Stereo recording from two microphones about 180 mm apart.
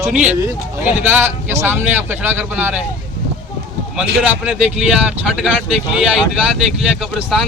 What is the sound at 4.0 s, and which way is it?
Speech, 5° right (ahead or behind).